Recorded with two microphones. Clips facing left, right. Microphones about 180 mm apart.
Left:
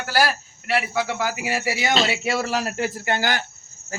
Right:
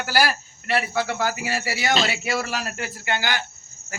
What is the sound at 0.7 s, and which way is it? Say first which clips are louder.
Speech: even; 10° left (ahead or behind).